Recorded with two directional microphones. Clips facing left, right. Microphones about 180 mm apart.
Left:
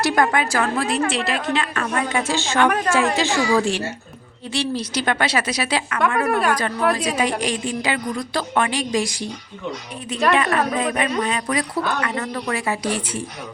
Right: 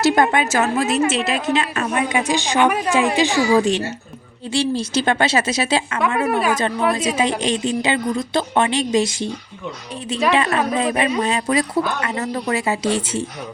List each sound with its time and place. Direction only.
0.0 s a woman's voice: 25° right (ahead or behind)
6.2 s a woman's voice: 5° right (ahead or behind)
7.2 s a woman's voice: 25° right (ahead or behind)
10.3 s a woman's voice: 25° right (ahead or behind)